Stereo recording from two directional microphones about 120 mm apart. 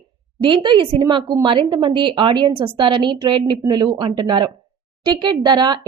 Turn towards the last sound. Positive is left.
turn(degrees=-35)  # may be behind; listen again after turning